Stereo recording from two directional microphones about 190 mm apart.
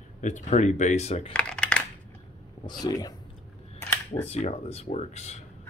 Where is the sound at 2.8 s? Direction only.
20° left (ahead or behind).